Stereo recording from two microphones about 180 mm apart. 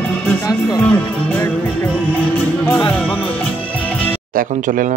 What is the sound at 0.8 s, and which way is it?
Speech, 10° left (ahead or behind).